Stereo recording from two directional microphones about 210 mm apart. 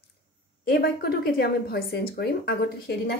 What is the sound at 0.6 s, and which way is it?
Speech, 45° left (ahead or behind).